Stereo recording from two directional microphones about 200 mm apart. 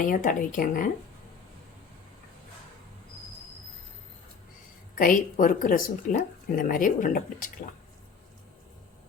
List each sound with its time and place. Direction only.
0.0 s speech: 40° left (ahead or behind)
4.9 s speech: 40° left (ahead or behind)